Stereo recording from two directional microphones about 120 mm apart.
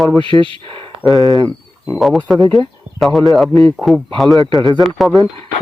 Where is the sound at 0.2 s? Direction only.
45° right (ahead or behind).